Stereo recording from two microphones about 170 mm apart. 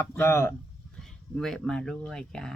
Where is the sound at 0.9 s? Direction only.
Centre (ahead or behind).